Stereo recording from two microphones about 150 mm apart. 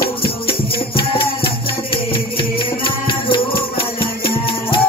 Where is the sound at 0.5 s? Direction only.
35° left (ahead or behind).